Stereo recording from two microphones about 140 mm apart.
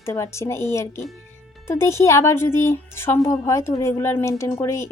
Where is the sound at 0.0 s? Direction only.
20° left (ahead or behind).